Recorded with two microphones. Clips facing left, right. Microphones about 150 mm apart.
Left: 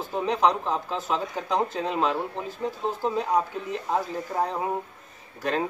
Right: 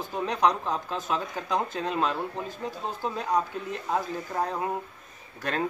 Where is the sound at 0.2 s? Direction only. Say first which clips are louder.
Left 2 dB; 5° left (ahead or behind).